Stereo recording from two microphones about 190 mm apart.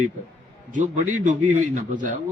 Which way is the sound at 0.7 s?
40° right (ahead or behind).